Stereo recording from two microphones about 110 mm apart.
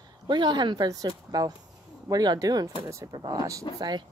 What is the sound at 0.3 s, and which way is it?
Speech, 45° right (ahead or behind).